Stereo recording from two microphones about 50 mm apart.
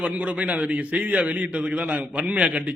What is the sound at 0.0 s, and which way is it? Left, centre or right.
A man's voice, right.